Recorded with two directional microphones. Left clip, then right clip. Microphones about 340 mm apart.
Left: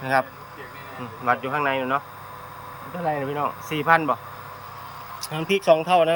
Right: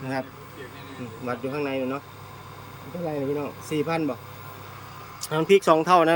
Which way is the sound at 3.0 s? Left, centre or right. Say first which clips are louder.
Left 3 dB; left.